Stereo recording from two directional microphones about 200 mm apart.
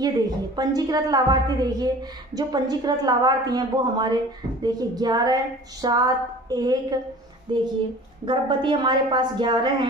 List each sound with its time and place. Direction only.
0.6 s a woman's voice: 20° right (ahead or behind)